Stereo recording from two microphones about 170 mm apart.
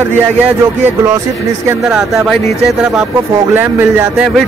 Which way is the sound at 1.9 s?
Centre (ahead or behind).